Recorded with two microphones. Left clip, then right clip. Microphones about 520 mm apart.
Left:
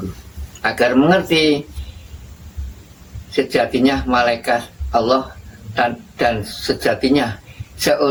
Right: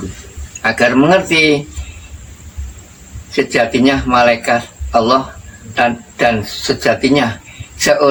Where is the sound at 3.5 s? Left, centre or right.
Left.